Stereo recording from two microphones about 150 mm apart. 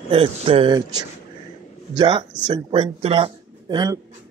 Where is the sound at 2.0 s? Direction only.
30° right (ahead or behind).